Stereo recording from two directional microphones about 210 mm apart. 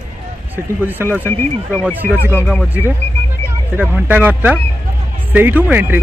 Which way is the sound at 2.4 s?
Centre (ahead or behind).